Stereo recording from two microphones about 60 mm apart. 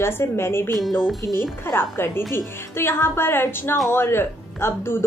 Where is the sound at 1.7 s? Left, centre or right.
Left.